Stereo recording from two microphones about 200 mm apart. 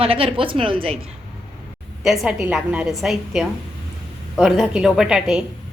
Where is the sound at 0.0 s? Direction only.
30° right (ahead or behind).